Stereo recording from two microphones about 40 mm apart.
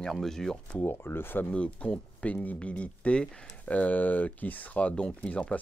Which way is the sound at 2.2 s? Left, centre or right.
Left.